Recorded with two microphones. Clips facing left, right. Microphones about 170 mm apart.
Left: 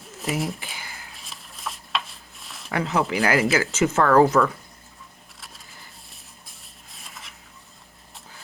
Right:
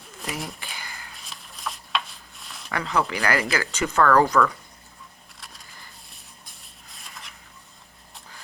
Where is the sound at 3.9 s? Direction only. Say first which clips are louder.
Left 1 dB; 20° left (ahead or behind).